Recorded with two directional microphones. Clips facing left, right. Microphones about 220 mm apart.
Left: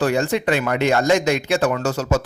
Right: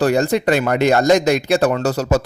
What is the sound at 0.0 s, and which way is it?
Speech, 40° right (ahead or behind).